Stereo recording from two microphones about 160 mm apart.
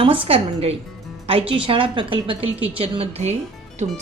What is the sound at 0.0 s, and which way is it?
A woman's voice, 35° right (ahead or behind).